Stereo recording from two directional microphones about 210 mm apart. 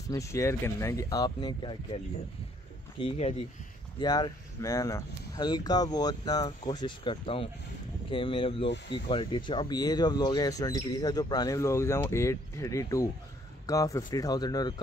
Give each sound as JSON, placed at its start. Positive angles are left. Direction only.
{"t": 0.1, "sound": "speech", "side_deg": 15}
{"t": 3.0, "sound": "speech", "side_deg": 25}
{"t": 8.6, "sound": "speech", "side_deg": 60}
{"t": 8.9, "sound": "speech", "side_deg": 25}